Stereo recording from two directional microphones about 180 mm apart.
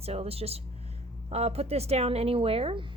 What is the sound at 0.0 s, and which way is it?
A woman's voice, 35° right (ahead or behind).